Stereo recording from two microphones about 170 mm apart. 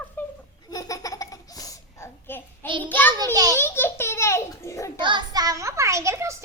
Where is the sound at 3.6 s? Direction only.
15° left (ahead or behind).